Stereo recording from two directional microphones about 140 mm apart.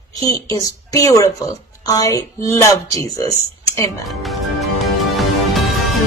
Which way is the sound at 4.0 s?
Centre (ahead or behind).